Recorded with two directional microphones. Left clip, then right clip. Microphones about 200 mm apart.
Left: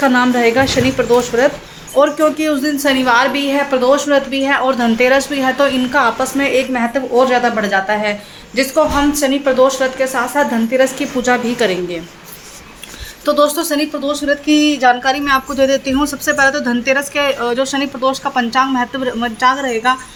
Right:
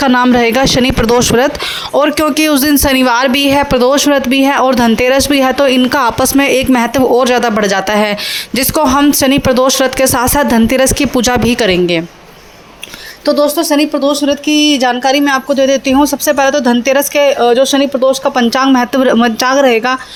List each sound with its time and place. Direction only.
0.0 s speech: 50° right (ahead or behind)
13.2 s speech: 20° right (ahead or behind)
13.7 s speech: 35° right (ahead or behind)
18.5 s speech: 45° right (ahead or behind)